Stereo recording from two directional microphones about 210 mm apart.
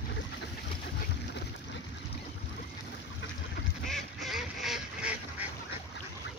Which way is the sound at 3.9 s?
Centre (ahead or behind).